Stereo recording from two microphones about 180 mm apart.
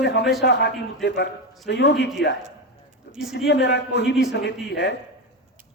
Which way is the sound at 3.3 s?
70° left (ahead or behind).